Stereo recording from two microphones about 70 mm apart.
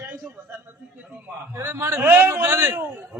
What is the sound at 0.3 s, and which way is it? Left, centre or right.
Music, right.